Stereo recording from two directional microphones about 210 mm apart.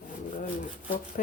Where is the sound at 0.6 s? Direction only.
35° left (ahead or behind).